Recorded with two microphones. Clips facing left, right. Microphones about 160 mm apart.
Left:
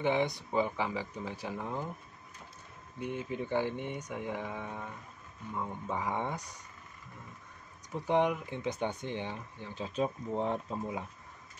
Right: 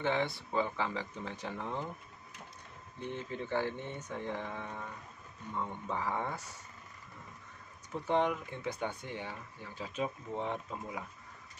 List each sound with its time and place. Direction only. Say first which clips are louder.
0.0 s speech: left 3 dB; 15° left (ahead or behind)
3.0 s speech: left 3 dB; 10° left (ahead or behind)
7.9 s speech: left 2 dB; 15° left (ahead or behind)
9.9 s speech: left 4 dB; 35° left (ahead or behind)